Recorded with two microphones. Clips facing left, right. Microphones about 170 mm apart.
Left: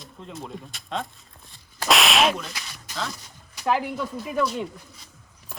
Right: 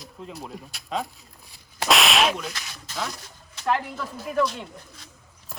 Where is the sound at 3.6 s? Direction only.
5° left (ahead or behind).